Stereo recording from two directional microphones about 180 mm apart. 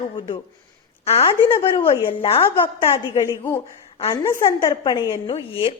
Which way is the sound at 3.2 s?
15° left (ahead or behind).